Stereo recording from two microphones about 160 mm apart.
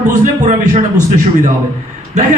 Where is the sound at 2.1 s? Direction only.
45° right (ahead or behind).